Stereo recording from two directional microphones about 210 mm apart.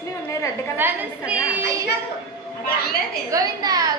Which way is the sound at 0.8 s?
10° right (ahead or behind).